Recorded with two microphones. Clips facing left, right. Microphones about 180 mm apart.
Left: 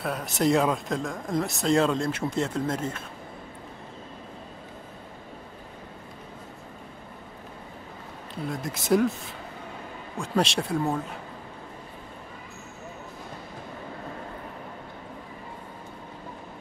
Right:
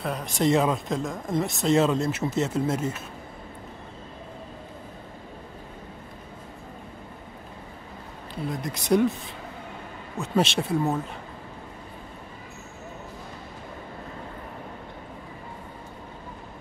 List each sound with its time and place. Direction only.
0.0 s speech: centre (ahead or behind)
8.5 s speech: centre (ahead or behind)
10.1 s speech: 5° right (ahead or behind)